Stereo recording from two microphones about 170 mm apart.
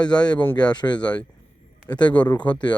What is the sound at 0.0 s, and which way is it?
Speech, 25° left (ahead or behind).